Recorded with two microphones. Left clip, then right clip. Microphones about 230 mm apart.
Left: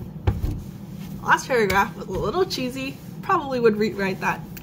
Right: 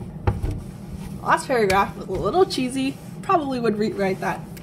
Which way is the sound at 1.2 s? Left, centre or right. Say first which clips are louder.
Even; centre.